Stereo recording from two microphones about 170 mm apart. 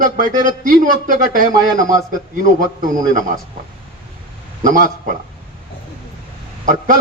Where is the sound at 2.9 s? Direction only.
50° right (ahead or behind).